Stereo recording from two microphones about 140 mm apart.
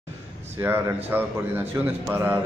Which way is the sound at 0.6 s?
15° right (ahead or behind).